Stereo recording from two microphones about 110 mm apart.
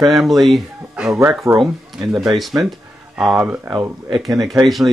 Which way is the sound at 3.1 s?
10° right (ahead or behind).